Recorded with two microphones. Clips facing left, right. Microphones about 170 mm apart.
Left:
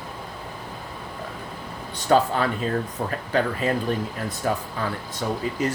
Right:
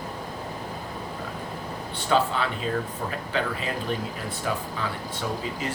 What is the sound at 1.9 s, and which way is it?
Speech, 45° left (ahead or behind).